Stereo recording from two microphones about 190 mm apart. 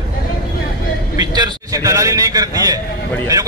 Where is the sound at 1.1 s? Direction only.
20° right (ahead or behind).